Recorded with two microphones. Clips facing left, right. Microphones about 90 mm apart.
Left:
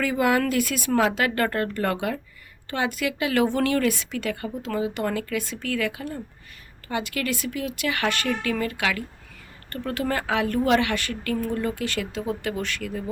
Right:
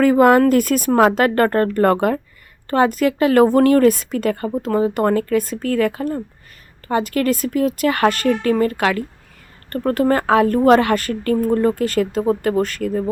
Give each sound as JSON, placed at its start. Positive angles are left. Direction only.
{"t": 0.0, "sound": "speech", "side_deg": -45}